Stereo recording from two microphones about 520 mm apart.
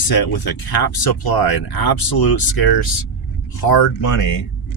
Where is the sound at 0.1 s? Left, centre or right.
Left.